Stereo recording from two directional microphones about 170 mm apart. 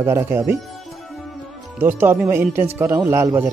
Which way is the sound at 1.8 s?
10° right (ahead or behind).